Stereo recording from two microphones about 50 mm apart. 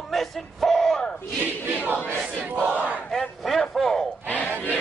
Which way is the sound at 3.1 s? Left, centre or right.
Centre.